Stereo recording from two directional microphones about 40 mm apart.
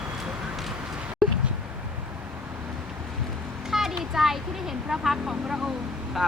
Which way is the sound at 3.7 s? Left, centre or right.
Centre.